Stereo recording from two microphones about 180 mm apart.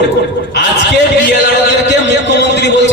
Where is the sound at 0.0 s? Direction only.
70° left (ahead or behind).